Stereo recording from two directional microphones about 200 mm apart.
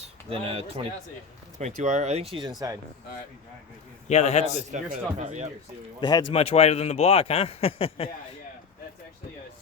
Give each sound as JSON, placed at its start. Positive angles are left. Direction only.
{"t": 0.0, "sound": "a sound", "side_deg": -30}
{"t": 1.5, "sound": "speech", "side_deg": -35}
{"t": 4.1, "sound": "a man's voice", "side_deg": 35}
{"t": 4.7, "sound": "speech", "side_deg": -35}
{"t": 6.0, "sound": "a man's voice", "side_deg": 20}